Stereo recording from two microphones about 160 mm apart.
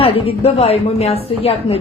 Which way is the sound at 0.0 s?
35° left (ahead or behind).